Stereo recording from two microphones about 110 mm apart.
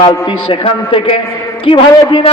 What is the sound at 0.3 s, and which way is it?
A man's voice, 50° left (ahead or behind).